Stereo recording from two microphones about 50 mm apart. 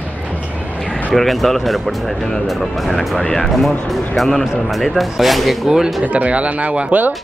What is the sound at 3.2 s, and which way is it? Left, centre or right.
Speech, centre.